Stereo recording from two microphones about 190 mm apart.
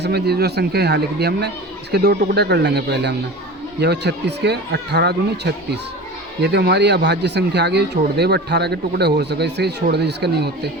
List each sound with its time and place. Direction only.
0.0 s speech: 60° right (ahead or behind)